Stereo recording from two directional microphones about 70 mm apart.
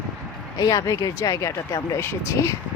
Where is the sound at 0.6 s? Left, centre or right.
Left.